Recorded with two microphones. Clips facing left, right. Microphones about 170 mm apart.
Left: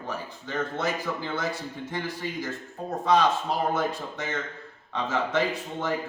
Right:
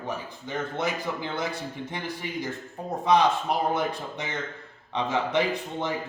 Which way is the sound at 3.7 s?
15° right (ahead or behind).